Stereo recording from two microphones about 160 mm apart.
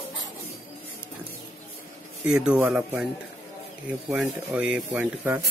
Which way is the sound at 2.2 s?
5° right (ahead or behind).